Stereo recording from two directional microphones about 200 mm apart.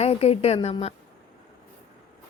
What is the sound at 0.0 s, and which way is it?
Speech, 30° left (ahead or behind).